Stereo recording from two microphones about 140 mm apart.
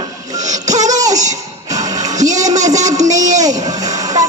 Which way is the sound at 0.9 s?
25° right (ahead or behind).